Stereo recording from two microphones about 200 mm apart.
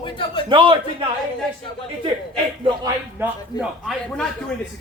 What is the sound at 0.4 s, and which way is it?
Speech, 25° right (ahead or behind).